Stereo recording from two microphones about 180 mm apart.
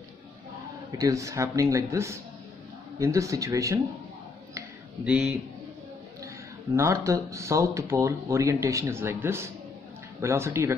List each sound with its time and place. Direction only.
0.9 s speech: 20° right (ahead or behind)
5.0 s speech: 5° right (ahead or behind)